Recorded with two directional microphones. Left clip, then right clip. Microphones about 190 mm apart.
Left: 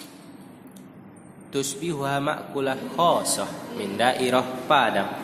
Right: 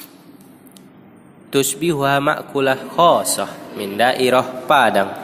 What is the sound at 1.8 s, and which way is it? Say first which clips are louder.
A man's voice: right 9 dB; 35° right (ahead or behind).